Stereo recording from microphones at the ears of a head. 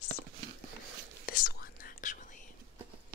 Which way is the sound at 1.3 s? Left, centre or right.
Left.